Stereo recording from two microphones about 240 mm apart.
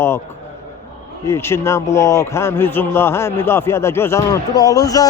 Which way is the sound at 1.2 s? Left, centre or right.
Centre.